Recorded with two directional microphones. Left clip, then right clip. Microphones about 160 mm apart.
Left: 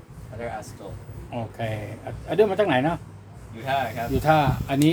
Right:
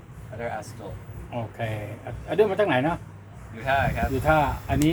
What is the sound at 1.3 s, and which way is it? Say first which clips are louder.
Speech: left 1 dB; 15° left (ahead or behind).